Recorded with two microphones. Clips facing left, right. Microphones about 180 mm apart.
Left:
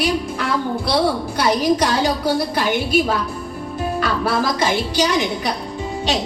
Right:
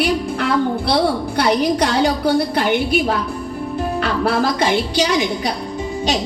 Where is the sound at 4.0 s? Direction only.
60° right (ahead or behind).